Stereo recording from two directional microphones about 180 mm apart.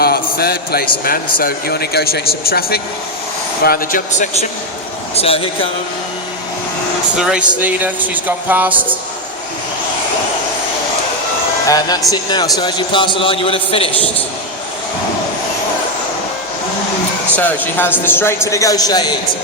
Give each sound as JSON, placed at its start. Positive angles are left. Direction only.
{"t": 0.0, "sound": "a sound", "side_deg": 60}
{"t": 1.4, "sound": "speech", "side_deg": 55}
{"t": 5.1, "sound": "a man's voice", "side_deg": 35}
{"t": 7.2, "sound": "speech", "side_deg": -5}
{"t": 11.6, "sound": "a man's voice", "side_deg": 20}
{"t": 17.3, "sound": "speech", "side_deg": 10}